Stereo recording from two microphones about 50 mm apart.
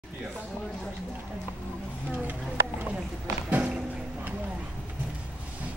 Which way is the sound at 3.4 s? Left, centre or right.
Right.